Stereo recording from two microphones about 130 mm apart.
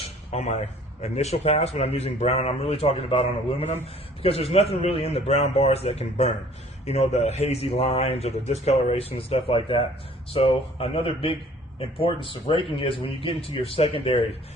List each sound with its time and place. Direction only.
0.3 s speech: 55° left (ahead or behind)